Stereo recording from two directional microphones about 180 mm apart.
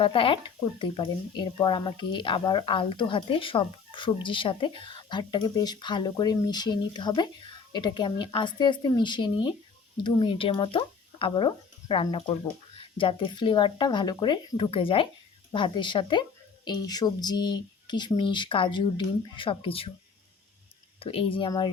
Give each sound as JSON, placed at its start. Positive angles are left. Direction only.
{"t": 0.0, "sound": "speech", "side_deg": 30}
{"t": 21.0, "sound": "speech", "side_deg": 30}